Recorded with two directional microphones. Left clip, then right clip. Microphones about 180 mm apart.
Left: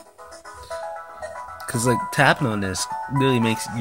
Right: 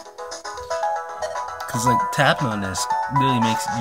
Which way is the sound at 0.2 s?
35° right (ahead or behind).